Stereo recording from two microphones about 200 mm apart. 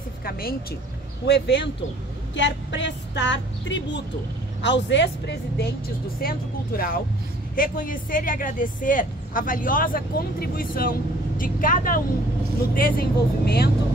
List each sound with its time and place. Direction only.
0.2 s speech: 50° left (ahead or behind)
1.2 s a woman's voice: 60° left (ahead or behind)
6.2 s speech: 50° left (ahead or behind)